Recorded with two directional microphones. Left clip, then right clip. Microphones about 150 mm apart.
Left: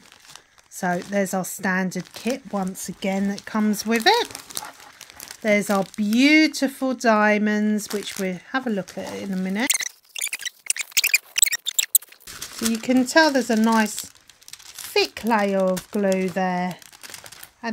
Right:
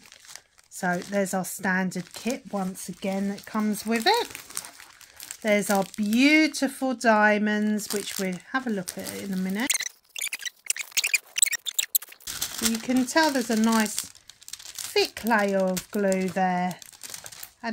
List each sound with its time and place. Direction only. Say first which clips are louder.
0.7 s speech: left 3 dB; 35° left (ahead or behind)
5.4 s speech: left 3 dB; 25° left (ahead or behind)
9.7 s a sound: left 3 dB; 5° left (ahead or behind)
12.8 s speech: left 6 dB; 40° left (ahead or behind)
15.0 s speech: left 3 dB; 30° left (ahead or behind)